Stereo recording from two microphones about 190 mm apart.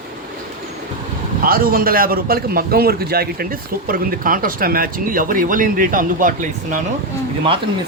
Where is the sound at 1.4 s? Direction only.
50° right (ahead or behind).